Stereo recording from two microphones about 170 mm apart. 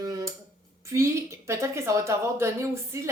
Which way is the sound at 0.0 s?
20° right (ahead or behind).